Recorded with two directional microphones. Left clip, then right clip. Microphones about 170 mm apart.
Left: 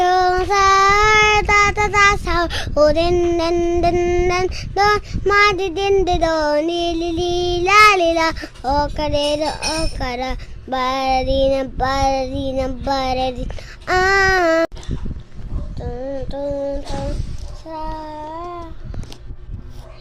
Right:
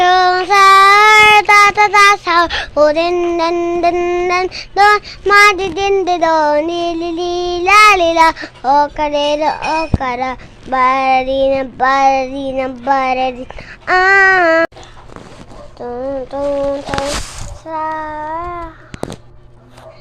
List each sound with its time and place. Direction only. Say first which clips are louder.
0.0 s child singing: right 5 dB; 20° left (ahead or behind)
15.8 s child singing: right 6 dB; centre (ahead or behind)
17.9 s child singing: right 8 dB; 5° left (ahead or behind)